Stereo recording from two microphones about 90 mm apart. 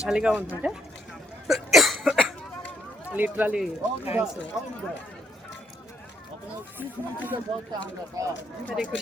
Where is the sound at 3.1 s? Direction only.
20° right (ahead or behind).